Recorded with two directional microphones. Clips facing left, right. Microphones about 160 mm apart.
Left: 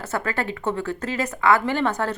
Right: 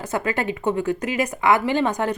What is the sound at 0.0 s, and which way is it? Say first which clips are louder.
A woman's voice: right 2 dB; 15° right (ahead or behind).